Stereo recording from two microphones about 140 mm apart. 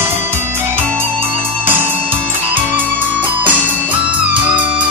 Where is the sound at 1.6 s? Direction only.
15° right (ahead or behind).